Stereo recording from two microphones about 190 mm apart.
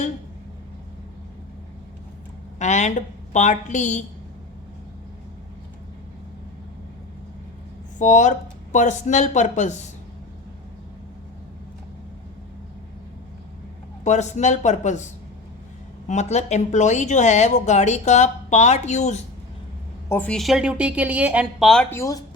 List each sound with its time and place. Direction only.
2.6 s a woman's voice: 35° left (ahead or behind)
7.9 s a woman's voice: 40° left (ahead or behind)
14.0 s a woman's voice: 40° left (ahead or behind)
20.1 s speech: 10° left (ahead or behind)